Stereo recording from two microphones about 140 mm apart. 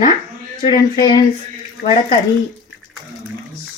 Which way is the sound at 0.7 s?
30° left (ahead or behind).